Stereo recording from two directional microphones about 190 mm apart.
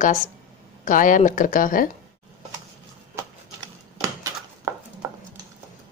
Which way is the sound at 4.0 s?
15° right (ahead or behind).